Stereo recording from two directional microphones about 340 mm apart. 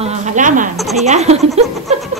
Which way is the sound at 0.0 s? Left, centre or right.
Centre.